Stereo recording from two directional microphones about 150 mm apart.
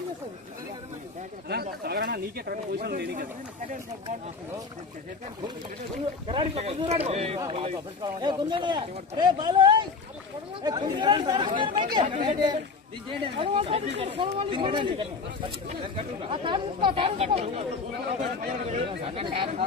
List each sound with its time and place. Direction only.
1.5 s speech: 90° right
6.2 s speech: 40° right (ahead or behind)
7.3 s speech: 30° right (ahead or behind); by 17.6 s 45° right (ahead or behind)
18.9 s speech: 35° right (ahead or behind)